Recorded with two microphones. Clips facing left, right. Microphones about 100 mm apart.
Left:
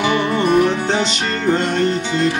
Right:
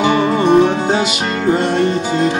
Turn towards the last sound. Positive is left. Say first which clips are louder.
# right 4 dB
turn(degrees=-25)  # may be behind; listen again after turning